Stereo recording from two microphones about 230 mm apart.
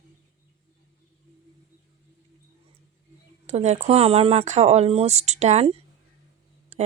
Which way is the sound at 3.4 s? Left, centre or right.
Right.